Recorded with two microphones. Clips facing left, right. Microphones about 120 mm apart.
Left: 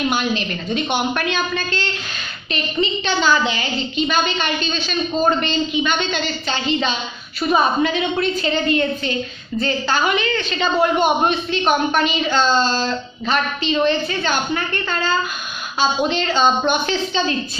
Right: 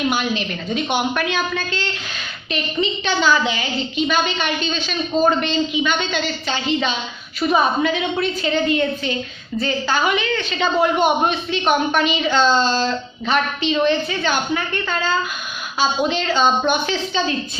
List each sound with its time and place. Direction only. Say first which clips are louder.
0.1 s a woman's voice: left 1 dB; 10° right (ahead or behind)
16.1 s a woman's voice: even; 10° right (ahead or behind)